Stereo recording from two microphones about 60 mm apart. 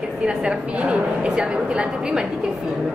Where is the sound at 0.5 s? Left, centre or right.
Centre.